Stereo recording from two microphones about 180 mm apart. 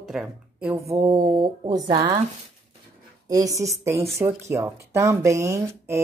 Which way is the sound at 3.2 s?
20° right (ahead or behind).